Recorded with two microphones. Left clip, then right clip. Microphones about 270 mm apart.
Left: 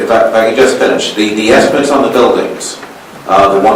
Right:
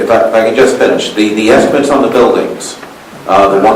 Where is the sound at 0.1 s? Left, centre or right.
Centre.